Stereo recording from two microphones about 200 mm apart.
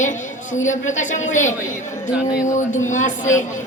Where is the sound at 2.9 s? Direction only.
40° left (ahead or behind).